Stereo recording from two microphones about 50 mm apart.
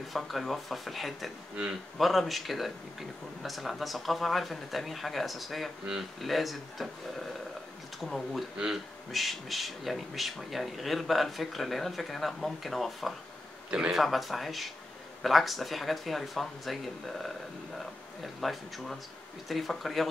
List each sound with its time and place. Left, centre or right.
0.1 s speech: centre
8.0 s speech: centre
13.7 s speech: centre
13.9 s speech: centre